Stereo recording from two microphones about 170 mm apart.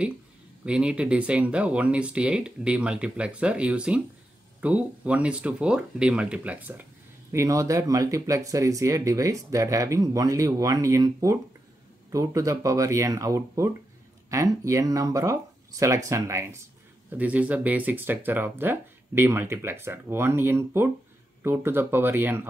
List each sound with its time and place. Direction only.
0.7 s speech: 5° right (ahead or behind)
7.3 s speech: 20° right (ahead or behind)